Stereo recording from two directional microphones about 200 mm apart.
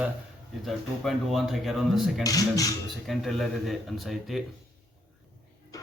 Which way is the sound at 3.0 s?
Centre (ahead or behind).